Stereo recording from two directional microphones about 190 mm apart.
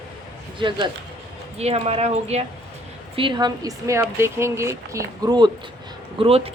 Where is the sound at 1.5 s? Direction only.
35° right (ahead or behind).